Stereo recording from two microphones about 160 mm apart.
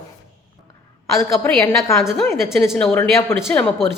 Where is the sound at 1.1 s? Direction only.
15° left (ahead or behind).